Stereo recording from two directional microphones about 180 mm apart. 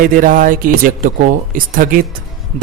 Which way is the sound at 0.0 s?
50° right (ahead or behind).